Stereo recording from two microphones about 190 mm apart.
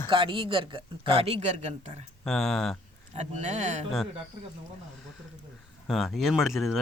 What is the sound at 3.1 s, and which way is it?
Speech, 35° right (ahead or behind).